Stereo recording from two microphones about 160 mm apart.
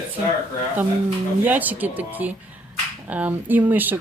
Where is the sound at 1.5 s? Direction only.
10° right (ahead or behind).